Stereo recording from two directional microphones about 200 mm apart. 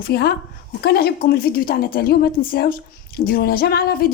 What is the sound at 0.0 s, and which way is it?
A woman's voice, 50° left (ahead or behind).